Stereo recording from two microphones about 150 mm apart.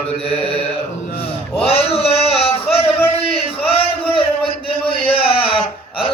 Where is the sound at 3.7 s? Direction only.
40° left (ahead or behind).